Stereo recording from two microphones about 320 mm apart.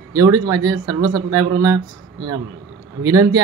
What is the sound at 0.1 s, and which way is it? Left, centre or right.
Speech, centre.